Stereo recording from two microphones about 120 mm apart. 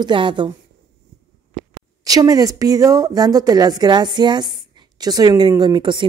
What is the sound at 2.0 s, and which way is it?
A woman's voice, 30° right (ahead or behind).